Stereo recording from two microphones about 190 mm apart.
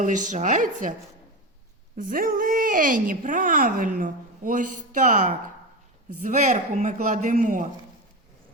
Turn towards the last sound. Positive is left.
turn(degrees=-45)  # may be behind; listen again after turning